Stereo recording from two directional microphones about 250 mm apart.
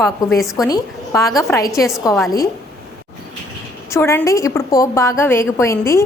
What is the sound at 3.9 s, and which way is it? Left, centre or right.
A woman's voice, centre.